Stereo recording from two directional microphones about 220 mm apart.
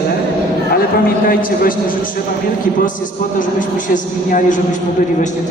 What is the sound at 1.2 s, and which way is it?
Speech, 40° left (ahead or behind).